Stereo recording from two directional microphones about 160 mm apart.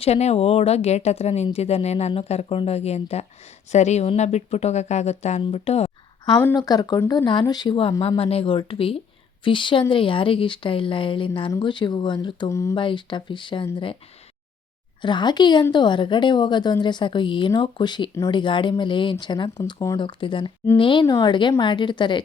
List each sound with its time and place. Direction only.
0.0 s a woman's voice: 40° left (ahead or behind)
6.6 s a woman's voice: 25° left (ahead or behind)
12.7 s speech: 30° left (ahead or behind)
15.0 s a woman's voice: 30° left (ahead or behind)